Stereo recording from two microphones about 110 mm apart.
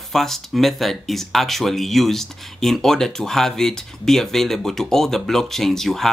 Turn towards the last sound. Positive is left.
turn(degrees=5)  # may be behind; listen again after turning